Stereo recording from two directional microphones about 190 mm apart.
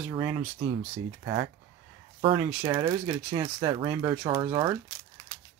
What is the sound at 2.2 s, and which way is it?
Speech, 30° right (ahead or behind).